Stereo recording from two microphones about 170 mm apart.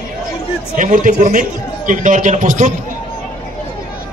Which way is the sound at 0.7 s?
50° right (ahead or behind).